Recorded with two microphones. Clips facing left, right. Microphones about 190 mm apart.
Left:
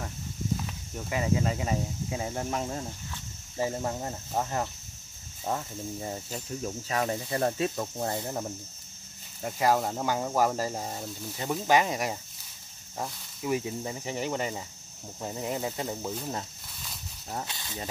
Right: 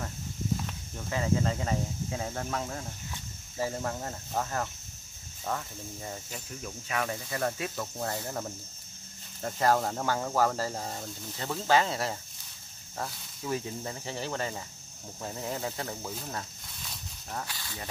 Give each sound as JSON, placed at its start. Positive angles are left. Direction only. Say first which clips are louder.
{"t": 1.1, "sound": "speech", "louder": "left 1 dB", "side_deg": 15}
{"t": 9.4, "sound": "speech", "louder": "left 1 dB", "side_deg": 10}
{"t": 17.3, "sound": "speech", "louder": "left 2 dB", "side_deg": 20}